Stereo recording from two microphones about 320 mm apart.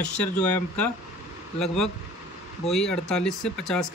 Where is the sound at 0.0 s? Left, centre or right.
Centre.